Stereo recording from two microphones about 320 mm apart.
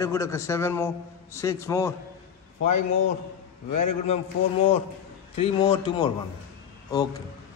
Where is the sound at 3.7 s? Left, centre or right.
Left.